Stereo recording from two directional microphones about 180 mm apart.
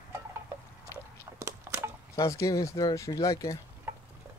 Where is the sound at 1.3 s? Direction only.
15° right (ahead or behind).